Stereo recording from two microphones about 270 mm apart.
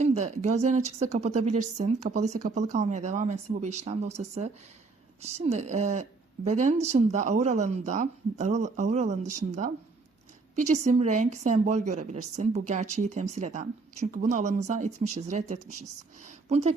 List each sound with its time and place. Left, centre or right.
0.0 s a woman's voice: right